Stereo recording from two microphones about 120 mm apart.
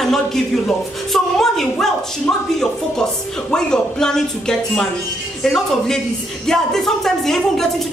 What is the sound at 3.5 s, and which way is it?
A man's voice, 5° left (ahead or behind).